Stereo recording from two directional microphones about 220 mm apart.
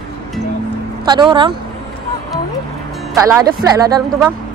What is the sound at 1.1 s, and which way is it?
Speech, 20° right (ahead or behind).